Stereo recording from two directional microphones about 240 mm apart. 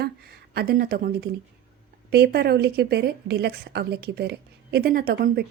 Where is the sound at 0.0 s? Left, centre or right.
Right.